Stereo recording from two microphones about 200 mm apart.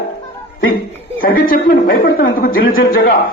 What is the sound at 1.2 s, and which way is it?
A man's voice, 45° left (ahead or behind).